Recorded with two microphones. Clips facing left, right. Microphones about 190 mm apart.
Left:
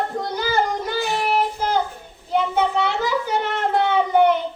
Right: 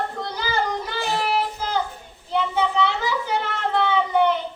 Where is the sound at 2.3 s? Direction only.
50° left (ahead or behind).